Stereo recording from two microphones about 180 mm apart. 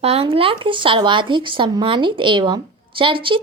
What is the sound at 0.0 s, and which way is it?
A woman's voice, 35° right (ahead or behind).